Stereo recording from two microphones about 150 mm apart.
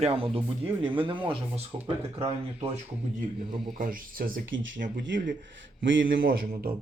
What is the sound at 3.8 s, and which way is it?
Speech, 70° right (ahead or behind).